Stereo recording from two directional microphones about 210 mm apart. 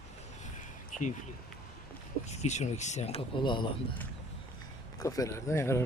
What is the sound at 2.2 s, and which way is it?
Speech, 30° left (ahead or behind).